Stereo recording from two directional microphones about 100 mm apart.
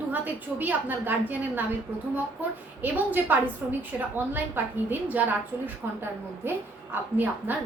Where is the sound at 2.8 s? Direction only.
20° right (ahead or behind).